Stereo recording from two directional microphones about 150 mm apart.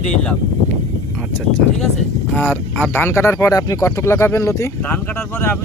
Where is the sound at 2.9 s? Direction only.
15° left (ahead or behind).